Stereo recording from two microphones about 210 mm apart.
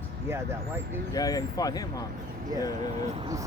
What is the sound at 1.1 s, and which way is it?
Speech, 15° left (ahead or behind).